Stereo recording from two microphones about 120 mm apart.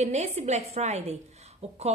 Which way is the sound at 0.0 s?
65° right (ahead or behind).